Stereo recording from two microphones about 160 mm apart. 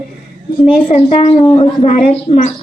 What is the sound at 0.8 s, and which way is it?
A woman's voice, 40° left (ahead or behind).